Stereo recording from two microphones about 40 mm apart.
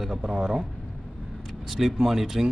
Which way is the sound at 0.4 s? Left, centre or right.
Centre.